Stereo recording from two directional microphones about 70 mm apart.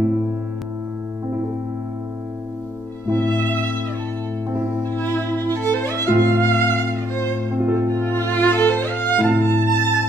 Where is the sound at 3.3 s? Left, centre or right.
Left.